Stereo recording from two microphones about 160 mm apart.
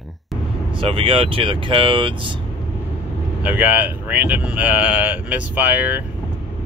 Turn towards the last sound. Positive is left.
turn(degrees=-10)  # may be behind; listen again after turning